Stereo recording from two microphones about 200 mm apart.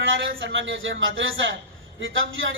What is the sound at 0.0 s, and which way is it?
A woman's voice, 65° right (ahead or behind).